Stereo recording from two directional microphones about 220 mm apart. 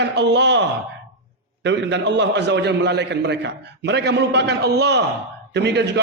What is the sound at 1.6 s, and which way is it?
A man's voice, 55° right (ahead or behind).